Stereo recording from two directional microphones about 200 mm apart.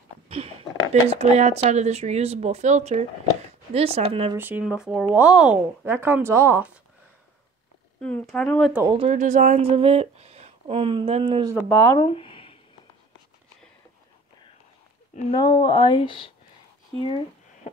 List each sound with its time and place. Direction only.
1.0 s speech: 30° right (ahead or behind)
4.4 s speech: 10° right (ahead or behind)
8.0 s speech: 5° left (ahead or behind)
8.8 s speech: 25° right (ahead or behind)
9.1 s speech: 40° right (ahead or behind)
11.7 s speech: 10° left (ahead or behind)
12.0 s a sound: 25° left (ahead or behind)
15.3 s speech: 20° left (ahead or behind)